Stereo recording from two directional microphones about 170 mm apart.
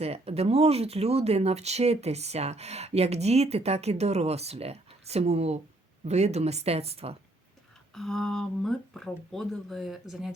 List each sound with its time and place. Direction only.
0.0 s speech: 35° right (ahead or behind)
7.9 s speech: centre (ahead or behind)